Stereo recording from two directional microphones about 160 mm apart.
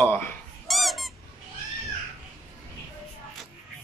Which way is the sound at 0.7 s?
Centre (ahead or behind).